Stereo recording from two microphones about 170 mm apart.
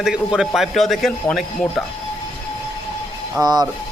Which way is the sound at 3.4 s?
25° right (ahead or behind).